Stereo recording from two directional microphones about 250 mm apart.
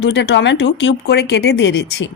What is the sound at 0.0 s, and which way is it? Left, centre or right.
Speech, left.